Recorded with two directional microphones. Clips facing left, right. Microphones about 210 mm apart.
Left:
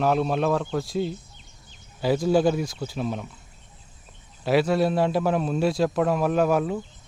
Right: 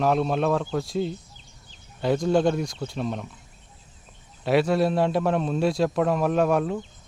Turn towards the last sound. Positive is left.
turn(degrees=0)  # may be behind; listen again after turning